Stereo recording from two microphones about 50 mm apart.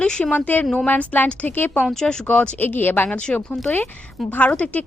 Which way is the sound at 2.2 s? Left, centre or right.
Left.